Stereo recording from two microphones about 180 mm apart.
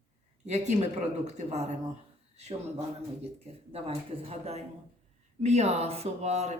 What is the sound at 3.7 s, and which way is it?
Speech, 35° right (ahead or behind).